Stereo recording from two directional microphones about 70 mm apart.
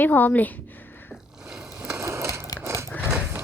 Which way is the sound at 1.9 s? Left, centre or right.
Right.